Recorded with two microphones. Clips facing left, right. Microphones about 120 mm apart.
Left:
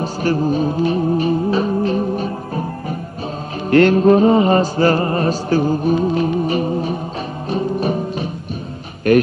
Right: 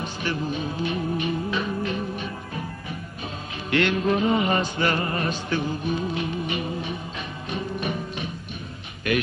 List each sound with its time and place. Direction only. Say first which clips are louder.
0.0 s music: left 10 dB; 40° left (ahead or behind)